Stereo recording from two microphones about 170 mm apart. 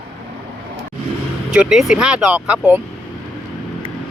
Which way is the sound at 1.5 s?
5° right (ahead or behind).